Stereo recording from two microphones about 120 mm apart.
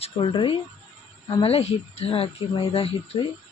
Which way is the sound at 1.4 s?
55° left (ahead or behind).